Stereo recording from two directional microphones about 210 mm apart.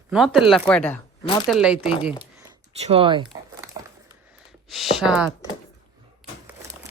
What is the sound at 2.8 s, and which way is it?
Speech, 25° right (ahead or behind).